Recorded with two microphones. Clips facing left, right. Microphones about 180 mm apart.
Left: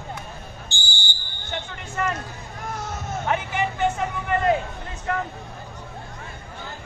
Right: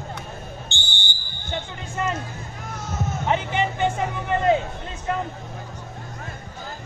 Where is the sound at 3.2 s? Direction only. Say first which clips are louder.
Right 2 dB; 20° right (ahead or behind).